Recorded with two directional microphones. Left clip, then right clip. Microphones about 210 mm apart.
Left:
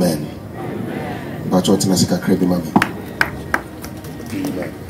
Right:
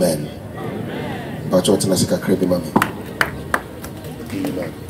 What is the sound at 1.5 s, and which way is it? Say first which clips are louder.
Speech: even; 50° left (ahead or behind).